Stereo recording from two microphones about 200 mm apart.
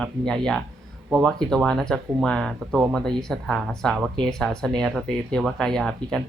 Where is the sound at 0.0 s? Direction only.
5° left (ahead or behind).